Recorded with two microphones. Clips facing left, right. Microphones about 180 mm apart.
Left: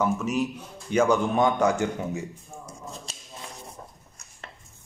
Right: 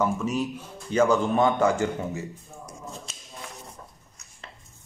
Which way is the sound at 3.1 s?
35° left (ahead or behind).